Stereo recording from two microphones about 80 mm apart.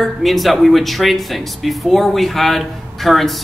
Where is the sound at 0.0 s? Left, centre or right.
Centre.